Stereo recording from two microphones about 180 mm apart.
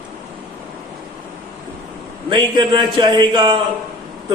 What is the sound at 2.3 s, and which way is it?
A man's voice, 25° right (ahead or behind).